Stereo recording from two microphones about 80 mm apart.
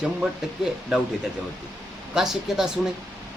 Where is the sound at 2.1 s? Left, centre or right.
Centre.